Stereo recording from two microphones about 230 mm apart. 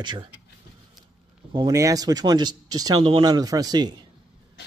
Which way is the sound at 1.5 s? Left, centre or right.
Centre.